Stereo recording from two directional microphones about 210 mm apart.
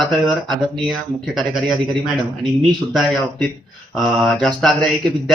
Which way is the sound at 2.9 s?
Centre (ahead or behind).